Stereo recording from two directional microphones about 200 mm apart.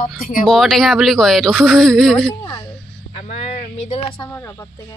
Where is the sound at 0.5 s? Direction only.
Centre (ahead or behind).